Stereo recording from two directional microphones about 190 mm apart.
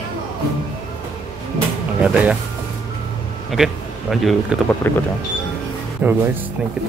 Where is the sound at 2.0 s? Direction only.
5° right (ahead or behind).